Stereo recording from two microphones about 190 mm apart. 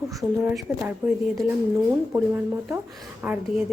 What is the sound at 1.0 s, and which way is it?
Speech, 15° right (ahead or behind).